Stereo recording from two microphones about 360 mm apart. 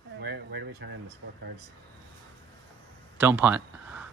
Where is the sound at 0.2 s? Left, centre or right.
Right.